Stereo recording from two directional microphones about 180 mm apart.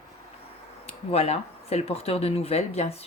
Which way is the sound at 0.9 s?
35° left (ahead or behind).